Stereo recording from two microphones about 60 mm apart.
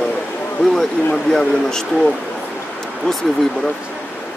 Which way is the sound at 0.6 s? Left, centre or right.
Centre.